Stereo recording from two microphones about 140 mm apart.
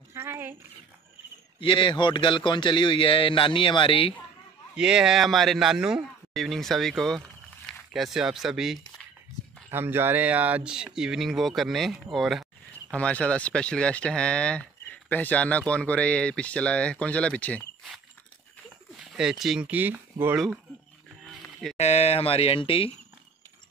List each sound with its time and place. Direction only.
0.1 s speech: 20° right (ahead or behind)
1.6 s a man's voice: 40° left (ahead or behind)
4.7 s speech: 5° right (ahead or behind)
9.7 s speech: 15° right (ahead or behind); by 17.6 s 10° left (ahead or behind)
18.9 s speech: 5° right (ahead or behind)
21.7 s speech: 50° left (ahead or behind)